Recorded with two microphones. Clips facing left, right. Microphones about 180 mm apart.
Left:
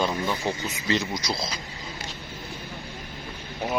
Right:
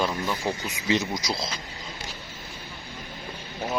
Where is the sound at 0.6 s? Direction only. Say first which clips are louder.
Right 2 dB; 15° right (ahead or behind).